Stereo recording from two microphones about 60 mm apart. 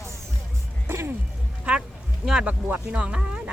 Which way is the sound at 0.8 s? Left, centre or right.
Right.